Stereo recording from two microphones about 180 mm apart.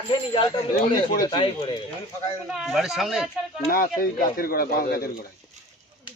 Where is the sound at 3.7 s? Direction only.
55° left (ahead or behind).